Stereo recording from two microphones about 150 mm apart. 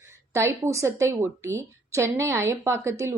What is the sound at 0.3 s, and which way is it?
Speech, 20° right (ahead or behind).